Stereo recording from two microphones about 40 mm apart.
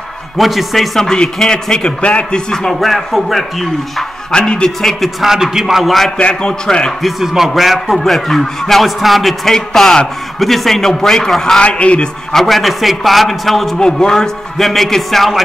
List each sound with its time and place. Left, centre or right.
0.4 s a man's voice: centre
0.9 s a man's voice: centre
1.8 s a man's voice: left
2.5 s a man's voice: centre
2.9 s a man's voice: centre
4.3 s a man's voice: left
5.2 s a man's voice: centre
6.1 s a man's voice: left
7.0 s a man's voice: centre
11.6 s a man's voice: left
12.3 s a man's voice: centre
13.7 s a man's voice: centre
14.6 s a man's voice: centre